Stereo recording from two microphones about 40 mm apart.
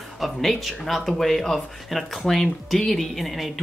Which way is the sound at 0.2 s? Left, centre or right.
Centre.